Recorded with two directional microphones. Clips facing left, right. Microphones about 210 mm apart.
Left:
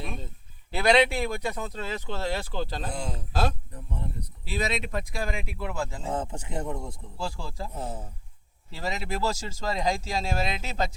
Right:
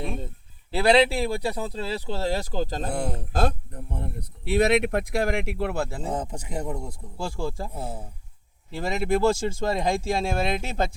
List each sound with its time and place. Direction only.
0.7 s speech: 30° right (ahead or behind)
2.9 s speech: 60° right (ahead or behind)
6.1 s speech: 15° right (ahead or behind)
8.7 s speech: 50° right (ahead or behind)